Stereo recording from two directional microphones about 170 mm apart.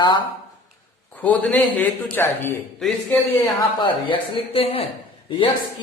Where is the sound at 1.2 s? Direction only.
10° left (ahead or behind).